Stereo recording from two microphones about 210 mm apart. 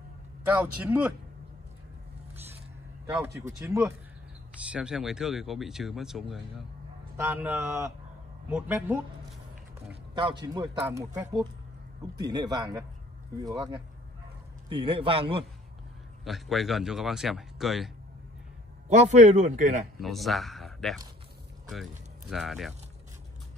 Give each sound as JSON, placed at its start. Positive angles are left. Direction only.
{"t": 0.6, "sound": "a man's voice", "side_deg": -5}
{"t": 3.4, "sound": "a man's voice", "side_deg": -15}
{"t": 4.7, "sound": "a man's voice", "side_deg": -5}
{"t": 10.4, "sound": "a man's voice", "side_deg": -20}
{"t": 16.3, "sound": "speech", "side_deg": 0}
{"t": 18.9, "sound": "a man's voice", "side_deg": -35}
{"t": 20.0, "sound": "speech", "side_deg": 0}
{"t": 22.3, "sound": "speech", "side_deg": 0}